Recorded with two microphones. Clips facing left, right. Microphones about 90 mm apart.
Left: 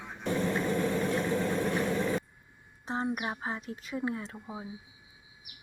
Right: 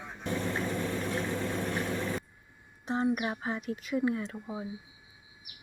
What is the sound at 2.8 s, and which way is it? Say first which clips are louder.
Speech: right 3 dB; 30° left (ahead or behind).